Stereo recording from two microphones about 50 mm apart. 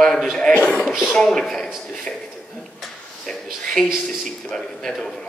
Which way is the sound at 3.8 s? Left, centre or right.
Centre.